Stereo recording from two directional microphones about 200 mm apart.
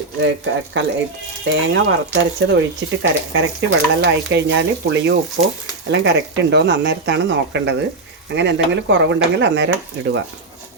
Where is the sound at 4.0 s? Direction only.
60° right (ahead or behind).